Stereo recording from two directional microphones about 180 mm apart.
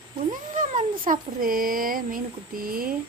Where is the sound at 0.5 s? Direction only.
45° right (ahead or behind).